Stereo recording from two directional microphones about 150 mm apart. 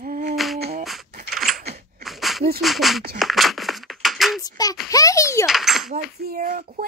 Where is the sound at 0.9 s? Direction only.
Centre (ahead or behind).